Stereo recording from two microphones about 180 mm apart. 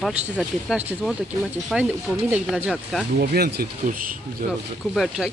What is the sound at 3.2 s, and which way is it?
Speech, 60° right (ahead or behind).